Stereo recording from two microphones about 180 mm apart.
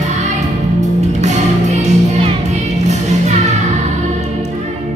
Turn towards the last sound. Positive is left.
turn(degrees=-40)  # may be behind; listen again after turning